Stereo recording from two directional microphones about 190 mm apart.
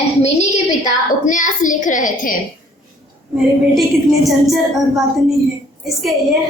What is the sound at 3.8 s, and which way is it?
A woman's voice, centre (ahead or behind).